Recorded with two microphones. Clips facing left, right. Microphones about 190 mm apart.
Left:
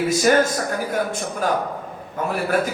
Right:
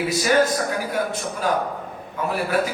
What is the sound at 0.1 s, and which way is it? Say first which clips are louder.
A man's voice: left 1 dB; 45° left (ahead or behind).